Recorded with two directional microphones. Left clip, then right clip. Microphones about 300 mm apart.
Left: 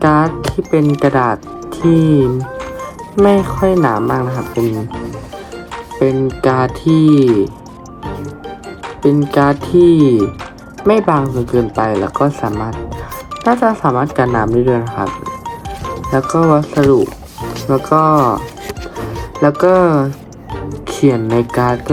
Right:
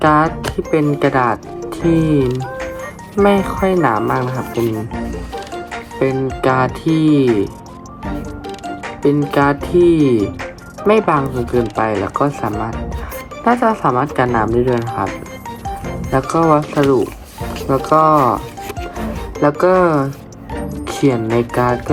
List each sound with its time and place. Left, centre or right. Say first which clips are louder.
0.0 s speech: even; centre
6.0 s speech: left 3 dB; centre
6.8 s speech: left 6 dB; right
9.0 s speech: left 2 dB; centre
10.8 s speech: left 1 dB; centre
19.4 s speech: left 2 dB; centre